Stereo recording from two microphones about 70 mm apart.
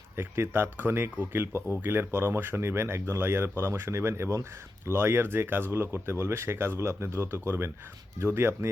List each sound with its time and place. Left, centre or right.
0.2 s speech: right